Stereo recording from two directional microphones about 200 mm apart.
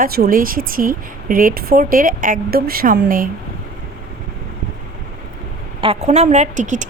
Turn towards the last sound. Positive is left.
turn(degrees=-40)  # may be behind; listen again after turning